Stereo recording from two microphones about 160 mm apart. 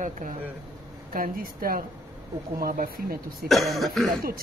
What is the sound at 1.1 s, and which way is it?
A woman's voice, 65° right (ahead or behind).